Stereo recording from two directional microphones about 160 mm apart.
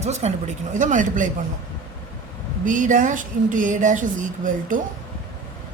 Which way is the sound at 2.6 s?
55° right (ahead or behind).